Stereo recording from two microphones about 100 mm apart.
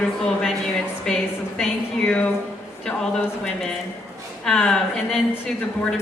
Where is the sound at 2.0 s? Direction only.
15° left (ahead or behind).